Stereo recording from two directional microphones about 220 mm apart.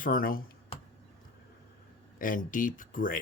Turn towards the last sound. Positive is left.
turn(degrees=40)  # may be behind; listen again after turning